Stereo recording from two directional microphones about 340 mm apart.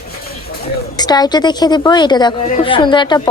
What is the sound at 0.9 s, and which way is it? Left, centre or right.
A woman's voice, centre.